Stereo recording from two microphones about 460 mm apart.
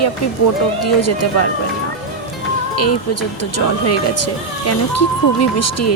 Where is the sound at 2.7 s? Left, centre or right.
Left.